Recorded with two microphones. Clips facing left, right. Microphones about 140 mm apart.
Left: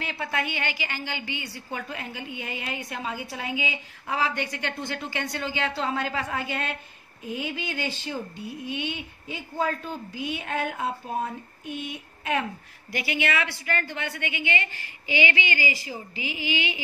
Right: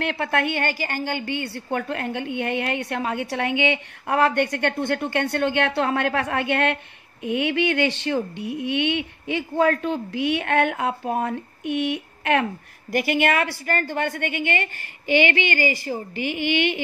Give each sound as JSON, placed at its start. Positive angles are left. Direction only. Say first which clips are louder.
{"t": 0.0, "sound": "a woman's voice", "louder": "right 7 dB", "side_deg": -60}
{"t": 7.2, "sound": "a sound", "louder": "right 10 dB", "side_deg": -70}
{"t": 12.9, "sound": "a woman's voice", "louder": "right 7 dB", "side_deg": -50}